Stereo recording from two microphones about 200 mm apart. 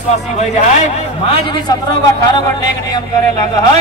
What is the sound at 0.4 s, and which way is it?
A man's voice, 35° left (ahead or behind).